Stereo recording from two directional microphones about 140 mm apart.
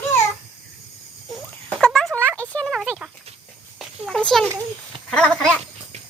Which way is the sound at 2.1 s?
20° right (ahead or behind).